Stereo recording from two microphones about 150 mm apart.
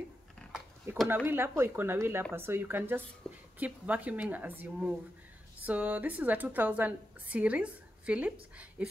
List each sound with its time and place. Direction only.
1.0 s a woman's voice: 15° right (ahead or behind)